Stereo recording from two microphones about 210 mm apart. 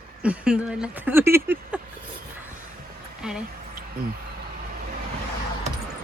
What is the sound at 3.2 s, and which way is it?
Speech, 5° right (ahead or behind).